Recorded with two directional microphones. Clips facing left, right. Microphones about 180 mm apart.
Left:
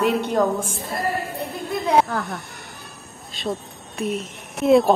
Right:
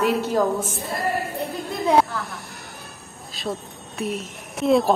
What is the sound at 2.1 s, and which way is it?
Speech, 45° left (ahead or behind).